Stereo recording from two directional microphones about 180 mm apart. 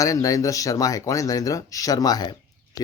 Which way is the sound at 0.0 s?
20° left (ahead or behind).